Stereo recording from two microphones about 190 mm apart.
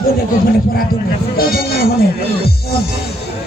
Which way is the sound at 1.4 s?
55° left (ahead or behind).